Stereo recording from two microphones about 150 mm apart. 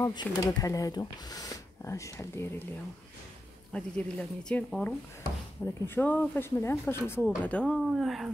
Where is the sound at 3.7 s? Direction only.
5° left (ahead or behind).